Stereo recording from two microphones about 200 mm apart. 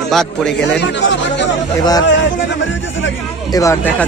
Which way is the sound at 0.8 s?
60° left (ahead or behind).